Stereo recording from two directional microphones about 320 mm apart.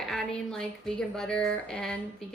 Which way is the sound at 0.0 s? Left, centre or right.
Centre.